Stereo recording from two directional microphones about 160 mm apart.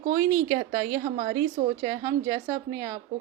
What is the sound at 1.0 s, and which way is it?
Speech, 60° right (ahead or behind).